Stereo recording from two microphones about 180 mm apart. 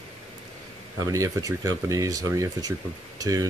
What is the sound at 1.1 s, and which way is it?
Speech, 20° right (ahead or behind).